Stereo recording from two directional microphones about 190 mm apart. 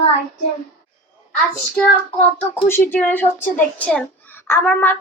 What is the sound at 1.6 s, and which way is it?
Child singing, 5° left (ahead or behind).